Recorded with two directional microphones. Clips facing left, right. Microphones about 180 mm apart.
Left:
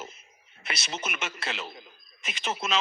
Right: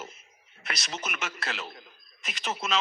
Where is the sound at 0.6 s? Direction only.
Centre (ahead or behind).